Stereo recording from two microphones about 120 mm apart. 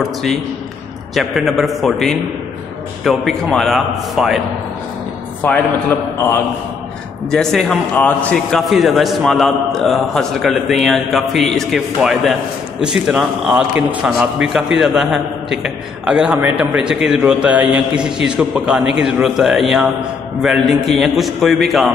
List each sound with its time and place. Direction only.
0.0 s a man's voice: centre (ahead or behind)
5.4 s a man's voice: 15° left (ahead or behind)
7.2 s a man's voice: 5° left (ahead or behind)
7.9 s a man's voice: 15° left (ahead or behind); by 16.6 s 15° right (ahead or behind)
16.7 s a man's voice: 5° right (ahead or behind)